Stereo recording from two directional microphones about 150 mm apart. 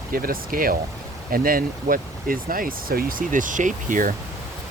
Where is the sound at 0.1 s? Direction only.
75° right (ahead or behind).